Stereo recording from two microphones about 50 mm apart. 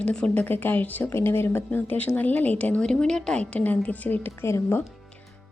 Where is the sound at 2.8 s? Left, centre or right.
Centre.